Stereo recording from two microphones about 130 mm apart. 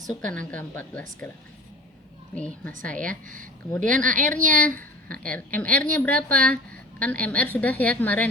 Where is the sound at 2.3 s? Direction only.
10° left (ahead or behind).